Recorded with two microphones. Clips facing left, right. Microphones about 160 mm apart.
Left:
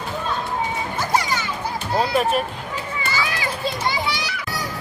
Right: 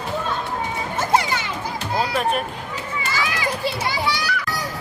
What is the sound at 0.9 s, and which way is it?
Music, 25° right (ahead or behind).